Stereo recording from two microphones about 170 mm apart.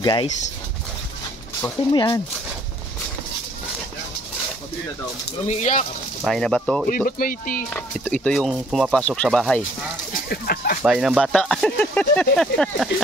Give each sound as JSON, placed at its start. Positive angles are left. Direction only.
{"t": 0.0, "sound": "speech", "side_deg": 25}
{"t": 1.9, "sound": "speech", "side_deg": 25}
{"t": 5.5, "sound": "speech", "side_deg": 45}
{"t": 6.2, "sound": "speech", "side_deg": 5}
{"t": 6.9, "sound": "speech", "side_deg": 55}
{"t": 7.7, "sound": "speech", "side_deg": 5}
{"t": 10.3, "sound": "speech", "side_deg": 65}
{"t": 10.8, "sound": "speech", "side_deg": -5}